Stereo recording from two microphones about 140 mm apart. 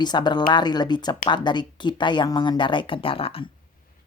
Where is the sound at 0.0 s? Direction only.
30° left (ahead or behind).